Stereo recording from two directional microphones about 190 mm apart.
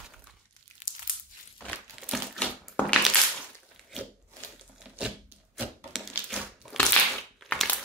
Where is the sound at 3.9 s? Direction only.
Centre (ahead or behind).